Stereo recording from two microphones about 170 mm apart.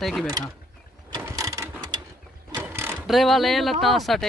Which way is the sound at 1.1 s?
20° right (ahead or behind).